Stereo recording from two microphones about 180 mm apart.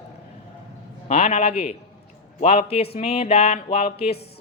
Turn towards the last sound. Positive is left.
turn(degrees=35)  # may be behind; listen again after turning